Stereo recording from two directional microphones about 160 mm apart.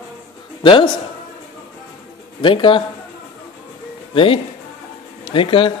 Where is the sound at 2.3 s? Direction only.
30° left (ahead or behind).